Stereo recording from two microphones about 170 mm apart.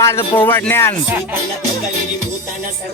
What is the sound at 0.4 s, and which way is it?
Speech, 15° left (ahead or behind).